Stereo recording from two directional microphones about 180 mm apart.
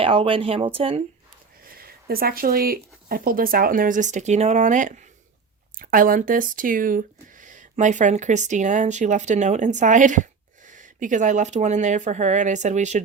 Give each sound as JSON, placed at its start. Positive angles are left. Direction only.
{"t": 0.0, "sound": "speech", "side_deg": -30}
{"t": 1.7, "sound": "speech", "side_deg": -55}